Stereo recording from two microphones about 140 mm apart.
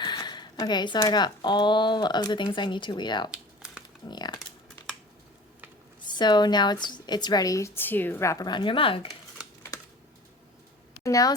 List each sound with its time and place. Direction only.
0.0 s a sound: 30° left (ahead or behind)
0.9 s a woman's voice: 30° left (ahead or behind)
3.3 s a sound: 5° right (ahead or behind)
4.0 s speech: 30° left (ahead or behind)
6.1 s a woman's voice: 30° left (ahead or behind)
9.7 s typing: 25° left (ahead or behind)
11.0 s speech: 25° left (ahead or behind)